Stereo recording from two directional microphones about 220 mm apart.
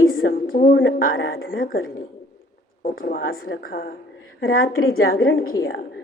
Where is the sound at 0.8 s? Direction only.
60° left (ahead or behind).